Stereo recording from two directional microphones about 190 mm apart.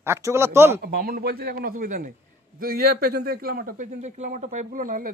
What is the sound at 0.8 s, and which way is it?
A man's voice, 50° right (ahead or behind).